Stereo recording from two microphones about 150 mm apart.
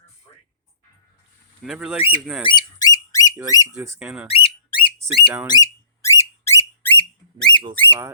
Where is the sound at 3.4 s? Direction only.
25° left (ahead or behind).